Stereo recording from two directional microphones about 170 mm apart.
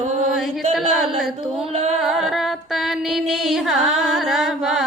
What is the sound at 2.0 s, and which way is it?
Music, centre (ahead or behind).